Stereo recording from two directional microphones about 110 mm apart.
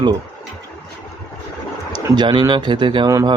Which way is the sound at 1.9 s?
35° right (ahead or behind).